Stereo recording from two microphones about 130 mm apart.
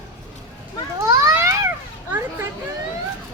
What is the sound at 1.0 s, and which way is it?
Children playing, 20° right (ahead or behind).